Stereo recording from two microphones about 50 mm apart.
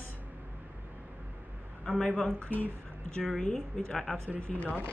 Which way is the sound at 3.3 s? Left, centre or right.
Centre.